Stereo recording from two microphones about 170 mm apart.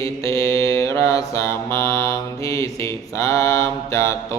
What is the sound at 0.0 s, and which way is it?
Mantra, 20° left (ahead or behind).